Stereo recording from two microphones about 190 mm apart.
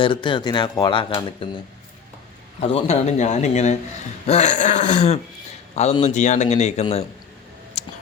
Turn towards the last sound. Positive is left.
turn(degrees=35)  # may be behind; listen again after turning